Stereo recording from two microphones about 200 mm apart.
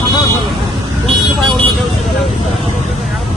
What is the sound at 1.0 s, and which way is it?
Vehicle, centre (ahead or behind).